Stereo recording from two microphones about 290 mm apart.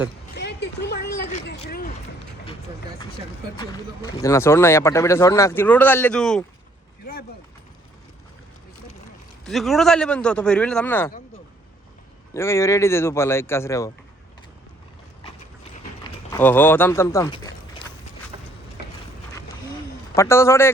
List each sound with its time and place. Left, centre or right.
0.3 s a sound: left
1.5 s speech: left
3.6 s speech: centre
7.0 s speech: left
9.4 s a man's voice: centre
12.3 s speech: centre
16.3 s speech: centre
20.1 s speech: centre